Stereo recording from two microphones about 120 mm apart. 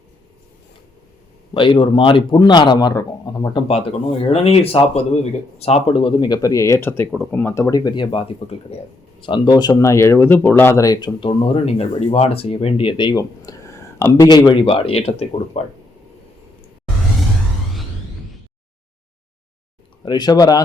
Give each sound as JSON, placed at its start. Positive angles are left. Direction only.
{"t": 1.5, "sound": "speech", "side_deg": 45}
{"t": 3.5, "sound": "speech", "side_deg": 55}
{"t": 7.9, "sound": "speech", "side_deg": 45}
{"t": 8.7, "sound": "speech", "side_deg": 60}
{"t": 9.2, "sound": "speech", "side_deg": 40}
{"t": 14.3, "sound": "speech", "side_deg": 35}
{"t": 20.1, "sound": "speech", "side_deg": 35}